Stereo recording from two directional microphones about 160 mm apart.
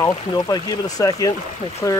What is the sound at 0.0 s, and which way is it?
Speech, 25° left (ahead or behind).